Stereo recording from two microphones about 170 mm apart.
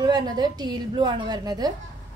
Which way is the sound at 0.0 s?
25° right (ahead or behind).